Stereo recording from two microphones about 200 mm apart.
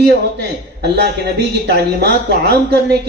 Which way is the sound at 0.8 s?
55° right (ahead or behind).